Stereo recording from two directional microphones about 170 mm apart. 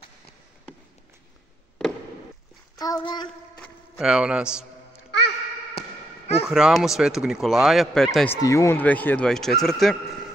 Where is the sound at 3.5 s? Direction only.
10° left (ahead or behind).